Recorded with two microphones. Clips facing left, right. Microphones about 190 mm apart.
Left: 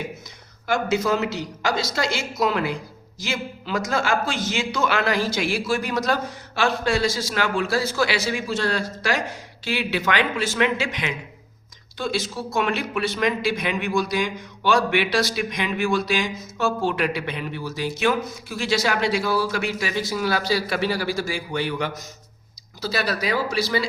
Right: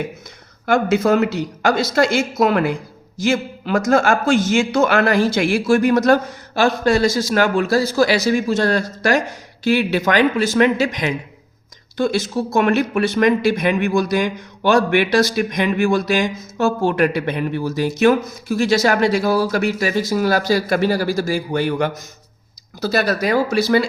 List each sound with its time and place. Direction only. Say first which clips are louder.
0.6 s speech: right 6 dB; 55° right (ahead or behind)